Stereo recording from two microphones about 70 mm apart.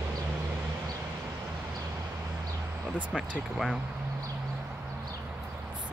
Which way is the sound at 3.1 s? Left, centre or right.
Centre.